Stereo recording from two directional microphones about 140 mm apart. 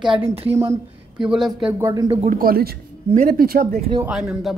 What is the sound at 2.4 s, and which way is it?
Speech, 90° right.